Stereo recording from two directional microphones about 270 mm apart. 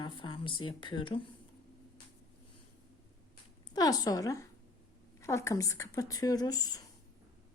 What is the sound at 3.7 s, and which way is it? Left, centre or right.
A woman's voice, centre.